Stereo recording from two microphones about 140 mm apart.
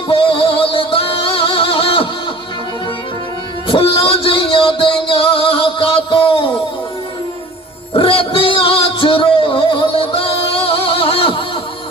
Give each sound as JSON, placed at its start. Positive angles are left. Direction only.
{"t": 0.1, "sound": "music", "side_deg": 40}
{"t": 3.7, "sound": "a sound", "side_deg": 40}
{"t": 7.9, "sound": "music", "side_deg": 40}